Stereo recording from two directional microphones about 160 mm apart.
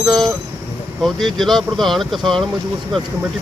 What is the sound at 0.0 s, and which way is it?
Speech, centre (ahead or behind).